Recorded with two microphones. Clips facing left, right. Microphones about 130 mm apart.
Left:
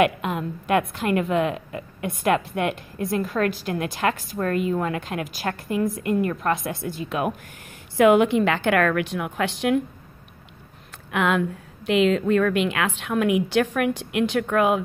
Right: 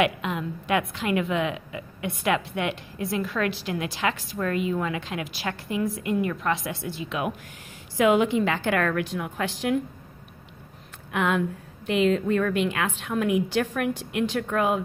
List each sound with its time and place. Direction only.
0.0 s a woman's voice: 45° left (ahead or behind)
8.0 s a woman's voice: 60° left (ahead or behind)
11.1 s a woman's voice: 90° left; by 14.8 s 70° left (ahead or behind)